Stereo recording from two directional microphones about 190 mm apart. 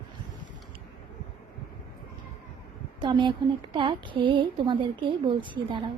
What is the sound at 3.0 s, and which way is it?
A woman's voice, 25° right (ahead or behind).